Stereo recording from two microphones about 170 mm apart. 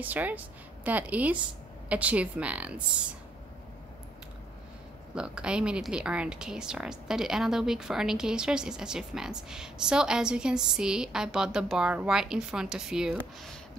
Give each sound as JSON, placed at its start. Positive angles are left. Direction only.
{"t": 0.0, "sound": "a woman's voice", "side_deg": -10}
{"t": 5.1, "sound": "speech", "side_deg": -5}